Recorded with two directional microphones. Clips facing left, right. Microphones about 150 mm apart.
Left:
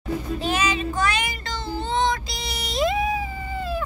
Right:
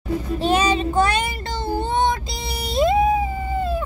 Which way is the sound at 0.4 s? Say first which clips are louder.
Right 7 dB; 30° right (ahead or behind).